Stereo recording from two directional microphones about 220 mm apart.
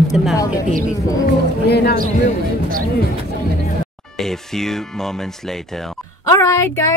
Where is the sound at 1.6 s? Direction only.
45° left (ahead or behind).